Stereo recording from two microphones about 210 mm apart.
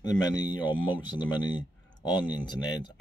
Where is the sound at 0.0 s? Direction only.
20° left (ahead or behind).